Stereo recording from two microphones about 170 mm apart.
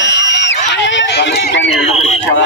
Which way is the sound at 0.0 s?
90° left.